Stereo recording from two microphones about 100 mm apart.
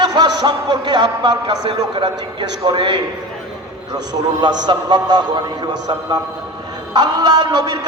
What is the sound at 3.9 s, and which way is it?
A man's voice, 45° right (ahead or behind).